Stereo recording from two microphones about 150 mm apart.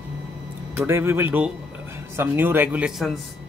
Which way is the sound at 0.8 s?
15° right (ahead or behind).